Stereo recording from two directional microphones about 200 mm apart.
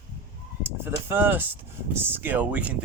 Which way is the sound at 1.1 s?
10° right (ahead or behind).